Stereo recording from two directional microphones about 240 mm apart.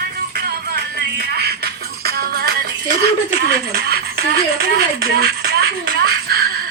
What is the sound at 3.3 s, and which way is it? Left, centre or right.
Speech, right.